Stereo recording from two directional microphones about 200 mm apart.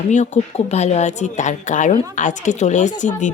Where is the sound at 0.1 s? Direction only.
35° left (ahead or behind).